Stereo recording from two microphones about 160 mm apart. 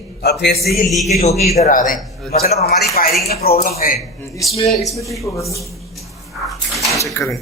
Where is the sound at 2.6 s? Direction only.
80° left; by 3.9 s 60° left (ahead or behind).